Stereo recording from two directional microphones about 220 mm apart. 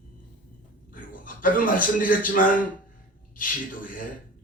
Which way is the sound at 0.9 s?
40° left (ahead or behind).